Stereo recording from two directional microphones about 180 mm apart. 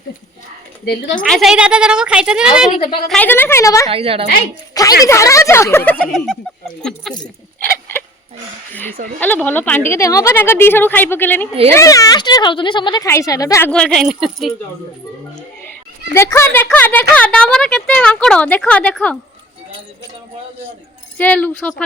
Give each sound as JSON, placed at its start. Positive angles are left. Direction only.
{"t": 1.2, "sound": "a woman's voice", "side_deg": 0}
{"t": 2.7, "sound": "a woman's voice", "side_deg": 30}
{"t": 3.1, "sound": "a woman's voice", "side_deg": 10}
{"t": 3.9, "sound": "a woman's voice", "side_deg": -30}
{"t": 4.7, "sound": "a woman's voice", "side_deg": 20}
{"t": 8.7, "sound": "a woman's voice", "side_deg": 10}
{"t": 13.7, "sound": "a woman's voice", "side_deg": 5}
{"t": 16.1, "sound": "a woman's voice", "side_deg": 15}
{"t": 21.2, "sound": "a woman's voice", "side_deg": 10}